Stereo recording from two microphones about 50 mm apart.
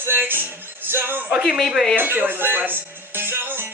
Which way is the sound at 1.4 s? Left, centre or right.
Centre.